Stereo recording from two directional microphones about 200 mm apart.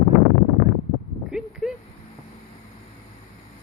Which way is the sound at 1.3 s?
5° right (ahead or behind).